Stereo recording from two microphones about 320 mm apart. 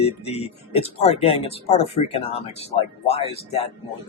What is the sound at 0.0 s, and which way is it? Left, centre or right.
Speech, centre.